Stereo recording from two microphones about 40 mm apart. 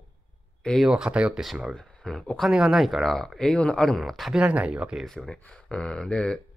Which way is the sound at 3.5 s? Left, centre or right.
Left.